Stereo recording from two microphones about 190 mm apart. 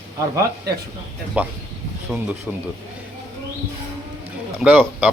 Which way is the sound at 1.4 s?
5° right (ahead or behind).